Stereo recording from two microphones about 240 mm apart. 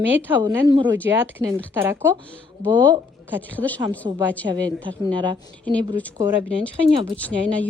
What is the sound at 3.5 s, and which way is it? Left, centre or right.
A woman's voice, centre.